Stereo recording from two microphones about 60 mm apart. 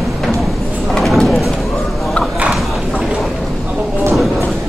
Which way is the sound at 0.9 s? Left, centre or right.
Centre.